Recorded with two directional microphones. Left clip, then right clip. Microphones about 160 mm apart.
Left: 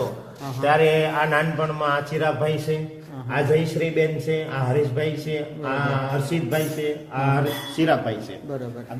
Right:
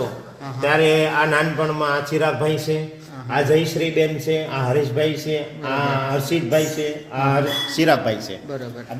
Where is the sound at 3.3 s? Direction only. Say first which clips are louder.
Right 3 dB; 65° right (ahead or behind).